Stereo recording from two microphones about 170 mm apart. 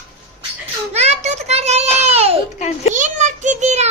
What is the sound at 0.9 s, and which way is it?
A child's voice, 40° right (ahead or behind).